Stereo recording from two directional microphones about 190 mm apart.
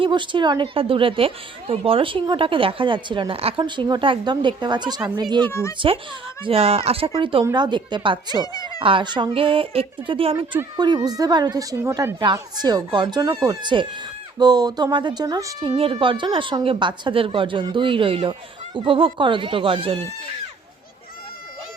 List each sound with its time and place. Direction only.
0.0 s a woman's voice: 25° right (ahead or behind)
5.5 s a child's voice: 15° left (ahead or behind)
6.4 s a woman's voice: 30° right (ahead or behind)